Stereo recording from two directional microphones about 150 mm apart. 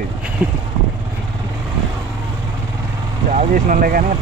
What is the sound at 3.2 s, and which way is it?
Speech, 60° right (ahead or behind).